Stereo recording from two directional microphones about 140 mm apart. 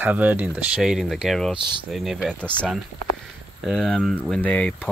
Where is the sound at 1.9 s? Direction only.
Centre (ahead or behind).